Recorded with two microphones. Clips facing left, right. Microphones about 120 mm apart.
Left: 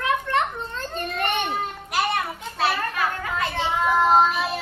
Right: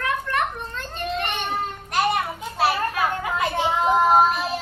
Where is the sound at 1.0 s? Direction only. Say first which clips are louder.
Right 1 dB; 45° left (ahead or behind).